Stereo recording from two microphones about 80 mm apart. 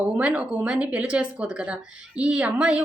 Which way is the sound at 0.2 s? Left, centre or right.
Centre.